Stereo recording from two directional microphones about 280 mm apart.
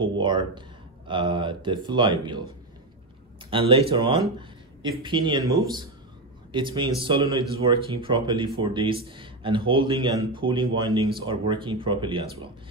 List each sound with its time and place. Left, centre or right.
0.0 s speech: centre
3.4 s speech: centre